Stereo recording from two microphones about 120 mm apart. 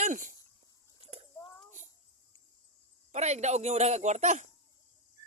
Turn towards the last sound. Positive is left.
turn(degrees=-80)